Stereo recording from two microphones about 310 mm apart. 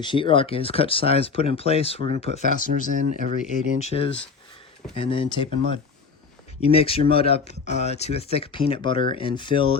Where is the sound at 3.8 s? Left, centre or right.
Centre.